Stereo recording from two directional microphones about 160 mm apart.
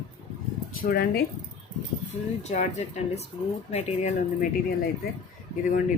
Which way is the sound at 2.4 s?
45° left (ahead or behind).